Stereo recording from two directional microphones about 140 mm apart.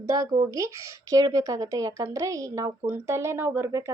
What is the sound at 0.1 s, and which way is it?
Speech, 25° right (ahead or behind).